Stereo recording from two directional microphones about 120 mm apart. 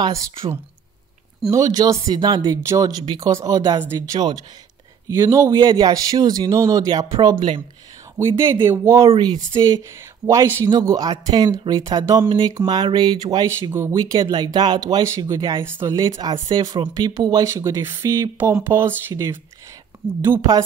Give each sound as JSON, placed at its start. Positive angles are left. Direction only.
{"t": 1.5, "sound": "speech", "side_deg": -30}
{"t": 5.0, "sound": "speech", "side_deg": -25}
{"t": 8.2, "sound": "speech", "side_deg": -20}
{"t": 9.0, "sound": "speech", "side_deg": -45}
{"t": 10.2, "sound": "speech", "side_deg": -25}
{"t": 13.5, "sound": "speech", "side_deg": -20}
{"t": 13.9, "sound": "speech", "side_deg": -40}